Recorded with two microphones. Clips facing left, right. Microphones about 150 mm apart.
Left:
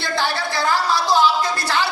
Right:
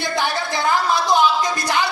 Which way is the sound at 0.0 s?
20° right (ahead or behind).